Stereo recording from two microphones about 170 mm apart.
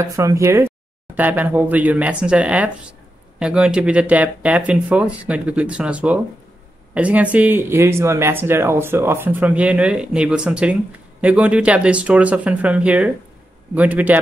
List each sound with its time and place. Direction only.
0.0 s speech: 15° right (ahead or behind)